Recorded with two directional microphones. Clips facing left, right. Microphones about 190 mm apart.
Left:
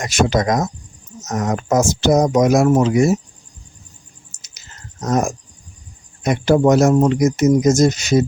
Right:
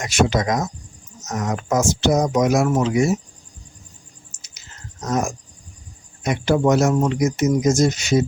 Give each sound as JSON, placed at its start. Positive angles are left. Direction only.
{"t": 0.0, "sound": "speech", "side_deg": 40}
{"t": 5.0, "sound": "speech", "side_deg": 45}